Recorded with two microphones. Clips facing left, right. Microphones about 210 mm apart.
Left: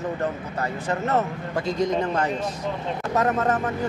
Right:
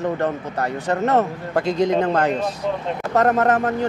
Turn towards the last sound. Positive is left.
turn(degrees=-65)  # may be behind; listen again after turning